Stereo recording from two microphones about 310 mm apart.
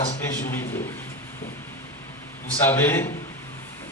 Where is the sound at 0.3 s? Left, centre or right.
Centre.